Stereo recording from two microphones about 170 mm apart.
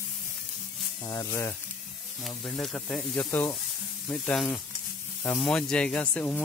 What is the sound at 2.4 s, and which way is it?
Speech, 5° left (ahead or behind).